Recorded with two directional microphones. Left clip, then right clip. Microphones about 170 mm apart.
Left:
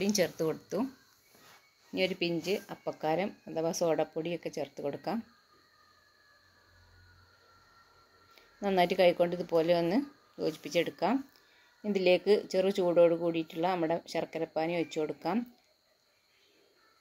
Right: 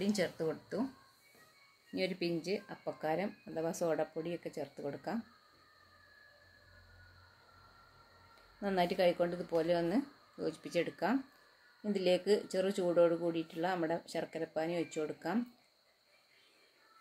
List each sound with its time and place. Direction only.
0.2 s speech: 25° left (ahead or behind)
2.0 s speech: centre (ahead or behind)
8.5 s speech: centre (ahead or behind)